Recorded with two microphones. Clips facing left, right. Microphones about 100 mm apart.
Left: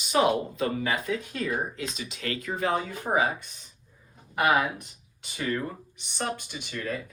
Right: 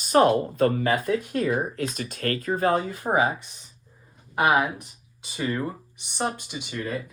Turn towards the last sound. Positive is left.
turn(degrees=-15)  # may be behind; listen again after turning